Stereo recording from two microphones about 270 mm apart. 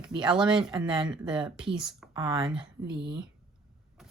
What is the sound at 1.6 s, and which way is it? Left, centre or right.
Speech, centre.